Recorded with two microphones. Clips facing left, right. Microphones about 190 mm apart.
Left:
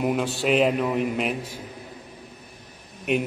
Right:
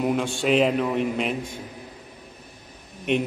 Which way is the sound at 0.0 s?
5° left (ahead or behind).